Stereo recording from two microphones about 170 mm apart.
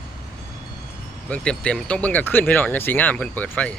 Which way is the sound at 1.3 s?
5° left (ahead or behind).